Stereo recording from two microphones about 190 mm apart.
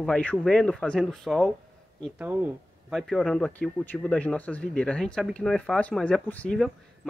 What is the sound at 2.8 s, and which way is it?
Speech, centre (ahead or behind).